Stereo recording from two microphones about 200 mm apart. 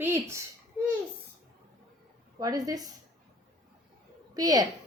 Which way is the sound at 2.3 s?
20° right (ahead or behind).